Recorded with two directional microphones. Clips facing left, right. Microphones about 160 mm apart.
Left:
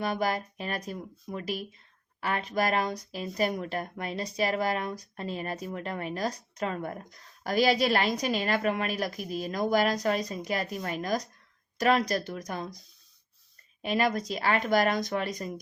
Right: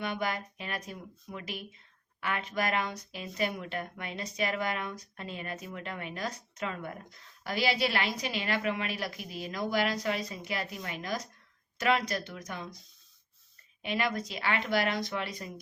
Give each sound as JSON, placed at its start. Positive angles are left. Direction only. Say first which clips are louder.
{"t": 0.0, "sound": "speech", "louder": "left 4 dB", "side_deg": 35}
{"t": 13.8, "sound": "speech", "louder": "left 5 dB", "side_deg": 40}